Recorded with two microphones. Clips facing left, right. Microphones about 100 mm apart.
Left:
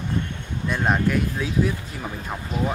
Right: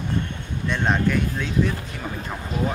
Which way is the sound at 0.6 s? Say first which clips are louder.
Even; 5° left (ahead or behind).